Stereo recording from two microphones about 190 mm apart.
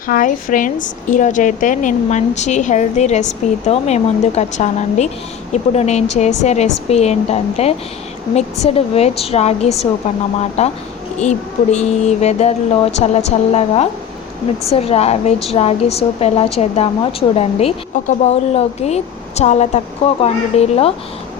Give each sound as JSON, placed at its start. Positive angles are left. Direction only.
{"t": 0.1, "sound": "a woman's voice", "side_deg": 45}